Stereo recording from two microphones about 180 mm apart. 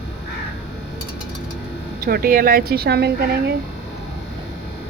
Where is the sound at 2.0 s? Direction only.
55° right (ahead or behind).